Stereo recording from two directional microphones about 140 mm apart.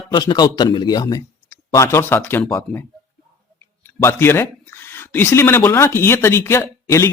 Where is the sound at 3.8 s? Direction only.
20° left (ahead or behind).